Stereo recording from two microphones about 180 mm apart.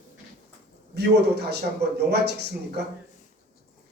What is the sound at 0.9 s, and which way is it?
A man's voice, 65° right (ahead or behind).